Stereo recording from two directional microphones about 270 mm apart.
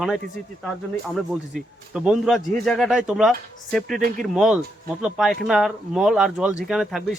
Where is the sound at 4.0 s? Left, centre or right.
Right.